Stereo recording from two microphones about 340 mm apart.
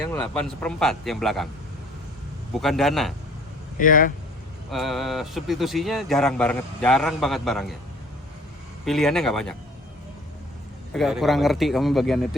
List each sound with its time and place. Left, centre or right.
0.1 s a man's voice: centre
2.5 s a man's voice: centre
3.8 s speech: left
4.7 s a man's voice: centre
8.8 s a man's voice: centre
10.9 s a man's voice: centre